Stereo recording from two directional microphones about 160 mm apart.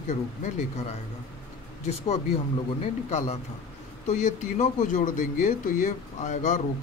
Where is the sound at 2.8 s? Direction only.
40° left (ahead or behind).